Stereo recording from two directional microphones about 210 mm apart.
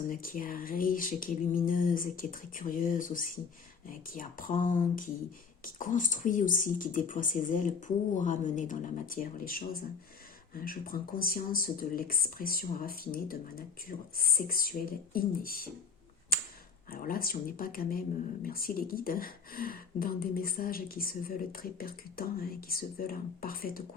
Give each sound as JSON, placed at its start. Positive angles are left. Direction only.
{"t": 0.1, "sound": "speech", "side_deg": 40}
{"t": 16.9, "sound": "speech", "side_deg": 45}